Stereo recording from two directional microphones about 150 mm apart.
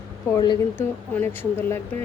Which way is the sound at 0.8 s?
15° left (ahead or behind).